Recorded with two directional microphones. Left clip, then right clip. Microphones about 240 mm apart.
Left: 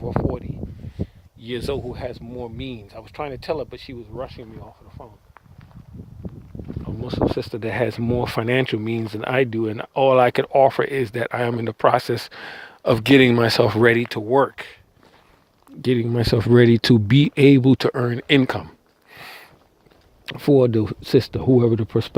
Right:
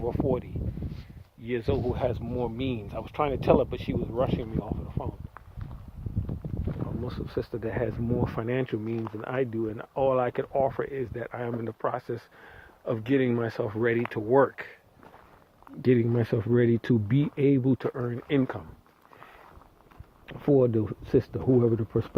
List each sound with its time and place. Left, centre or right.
0.3 s speech: centre
1.5 s speech: left
1.9 s speech: centre
7.0 s speech: left
15.8 s speech: left
19.1 s a sound: left
20.2 s speech: left